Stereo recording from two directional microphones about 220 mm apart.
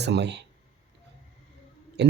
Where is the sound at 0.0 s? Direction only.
50° right (ahead or behind).